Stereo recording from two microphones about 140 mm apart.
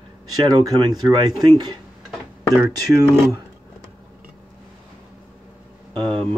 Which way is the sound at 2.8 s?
25° right (ahead or behind).